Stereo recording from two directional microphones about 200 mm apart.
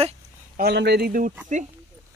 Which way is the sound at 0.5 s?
55° right (ahead or behind).